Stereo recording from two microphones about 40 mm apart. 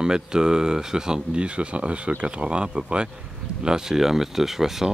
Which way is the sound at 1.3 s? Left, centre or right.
Right.